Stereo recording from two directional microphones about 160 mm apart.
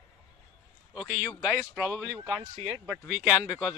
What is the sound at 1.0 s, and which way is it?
A man's voice, 5° right (ahead or behind).